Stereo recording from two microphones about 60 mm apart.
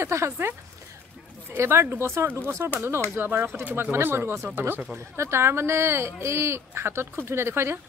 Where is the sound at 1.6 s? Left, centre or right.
Right.